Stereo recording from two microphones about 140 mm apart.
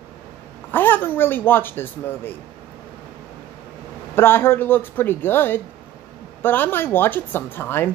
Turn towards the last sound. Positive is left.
turn(degrees=15)  # may be behind; listen again after turning